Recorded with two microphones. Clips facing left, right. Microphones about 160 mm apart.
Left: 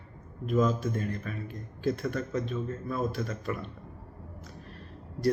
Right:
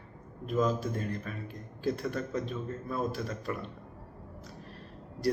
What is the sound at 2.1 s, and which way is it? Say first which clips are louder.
A man's voice: left 2 dB; centre (ahead or behind).